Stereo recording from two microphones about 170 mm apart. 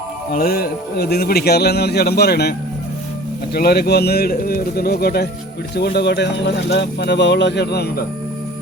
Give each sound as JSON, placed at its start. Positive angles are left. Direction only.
{"t": 0.3, "sound": "speech", "side_deg": 60}